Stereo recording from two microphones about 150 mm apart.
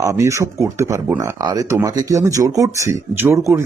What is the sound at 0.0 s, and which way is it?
Speech, 20° right (ahead or behind).